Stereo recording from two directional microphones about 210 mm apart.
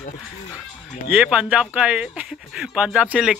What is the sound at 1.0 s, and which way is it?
Speech, 5° right (ahead or behind).